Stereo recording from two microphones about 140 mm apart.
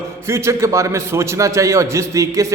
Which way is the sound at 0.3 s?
20° right (ahead or behind).